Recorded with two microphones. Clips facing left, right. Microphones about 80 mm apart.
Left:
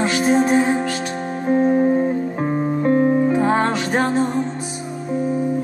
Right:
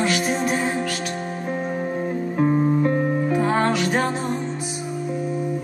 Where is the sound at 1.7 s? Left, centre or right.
Centre.